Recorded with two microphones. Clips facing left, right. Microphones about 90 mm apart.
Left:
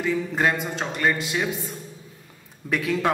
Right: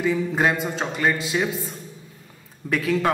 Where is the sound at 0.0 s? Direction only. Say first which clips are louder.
Right 2 dB; 10° right (ahead or behind).